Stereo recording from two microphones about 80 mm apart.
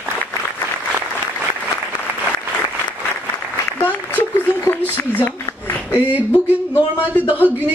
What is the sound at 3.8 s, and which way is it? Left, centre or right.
Applause, left.